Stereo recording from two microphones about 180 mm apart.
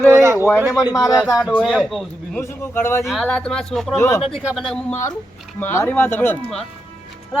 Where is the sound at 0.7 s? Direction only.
20° left (ahead or behind).